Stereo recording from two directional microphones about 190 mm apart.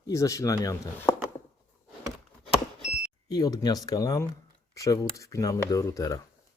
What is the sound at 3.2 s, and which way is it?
Speech, 20° left (ahead or behind).